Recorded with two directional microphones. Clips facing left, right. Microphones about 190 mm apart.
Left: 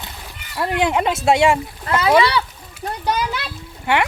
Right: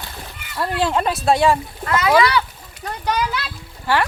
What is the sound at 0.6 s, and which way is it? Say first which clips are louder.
Speech: left 1 dB; 15° left (ahead or behind).